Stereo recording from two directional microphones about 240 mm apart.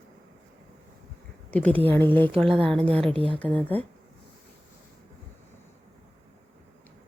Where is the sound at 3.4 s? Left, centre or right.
Centre.